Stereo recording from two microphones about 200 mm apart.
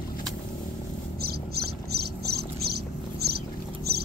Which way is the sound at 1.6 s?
50° right (ahead or behind).